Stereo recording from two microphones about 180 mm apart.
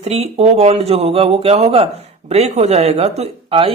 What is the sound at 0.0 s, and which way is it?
A woman's voice, 35° right (ahead or behind).